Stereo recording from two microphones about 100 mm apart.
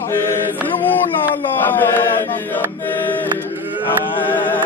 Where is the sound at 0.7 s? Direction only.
20° left (ahead or behind).